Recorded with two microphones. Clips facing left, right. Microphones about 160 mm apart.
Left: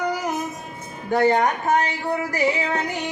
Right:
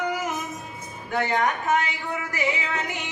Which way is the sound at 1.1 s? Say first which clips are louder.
Left 6 dB; 35° left (ahead or behind).